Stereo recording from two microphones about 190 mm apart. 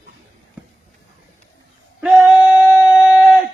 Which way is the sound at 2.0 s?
5° right (ahead or behind).